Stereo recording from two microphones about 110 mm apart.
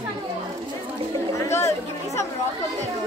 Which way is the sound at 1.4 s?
25° left (ahead or behind).